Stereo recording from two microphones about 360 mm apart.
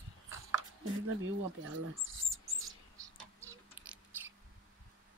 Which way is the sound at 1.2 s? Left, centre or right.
Right.